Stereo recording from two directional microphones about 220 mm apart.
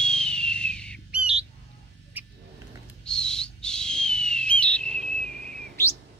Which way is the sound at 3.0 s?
5° left (ahead or behind).